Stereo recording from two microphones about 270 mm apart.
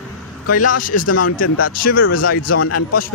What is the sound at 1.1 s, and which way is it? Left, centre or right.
Speech, left.